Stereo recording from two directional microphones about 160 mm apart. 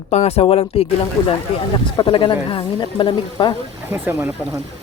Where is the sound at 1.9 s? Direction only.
30° left (ahead or behind).